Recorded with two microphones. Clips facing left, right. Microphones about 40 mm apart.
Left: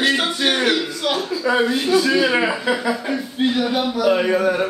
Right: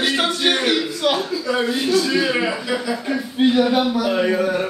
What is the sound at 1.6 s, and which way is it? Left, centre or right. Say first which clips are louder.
Speech: left 1 dB; centre.